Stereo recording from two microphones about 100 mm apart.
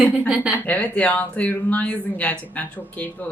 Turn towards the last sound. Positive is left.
turn(degrees=15)  # may be behind; listen again after turning